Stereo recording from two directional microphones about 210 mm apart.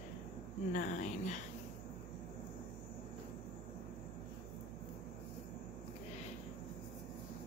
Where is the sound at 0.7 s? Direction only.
35° left (ahead or behind).